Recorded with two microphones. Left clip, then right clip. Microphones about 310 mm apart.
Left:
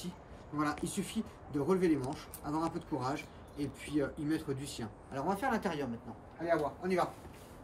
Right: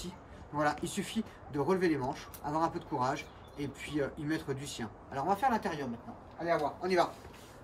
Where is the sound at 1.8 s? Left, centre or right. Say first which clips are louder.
Right 1 dB; right.